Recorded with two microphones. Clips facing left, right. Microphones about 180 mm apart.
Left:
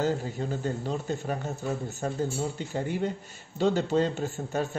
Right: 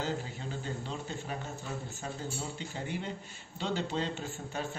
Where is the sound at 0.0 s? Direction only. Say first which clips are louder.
Left 8 dB; 45° left (ahead or behind).